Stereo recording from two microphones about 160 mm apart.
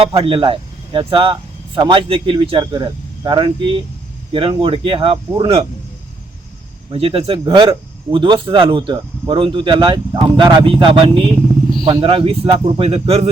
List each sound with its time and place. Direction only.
0.0 s speech: 35° right (ahead or behind)
6.9 s speech: 35° right (ahead or behind)